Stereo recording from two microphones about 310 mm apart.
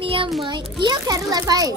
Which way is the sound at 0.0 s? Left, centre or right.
Centre.